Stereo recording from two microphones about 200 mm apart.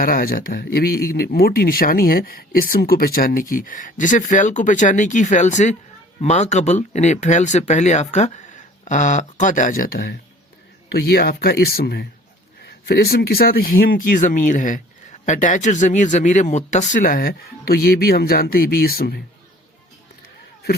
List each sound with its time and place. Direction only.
0.0 s speech: 45° left (ahead or behind)